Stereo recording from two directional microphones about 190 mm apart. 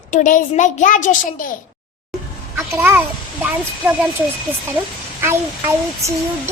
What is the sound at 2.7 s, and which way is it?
Speech, 15° right (ahead or behind).